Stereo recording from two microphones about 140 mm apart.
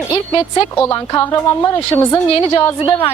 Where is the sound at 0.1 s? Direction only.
35° left (ahead or behind).